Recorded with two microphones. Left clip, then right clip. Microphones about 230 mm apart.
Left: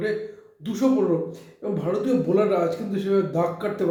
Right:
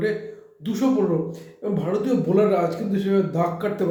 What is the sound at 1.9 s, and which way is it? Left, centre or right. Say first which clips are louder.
Speech: left 1 dB; centre.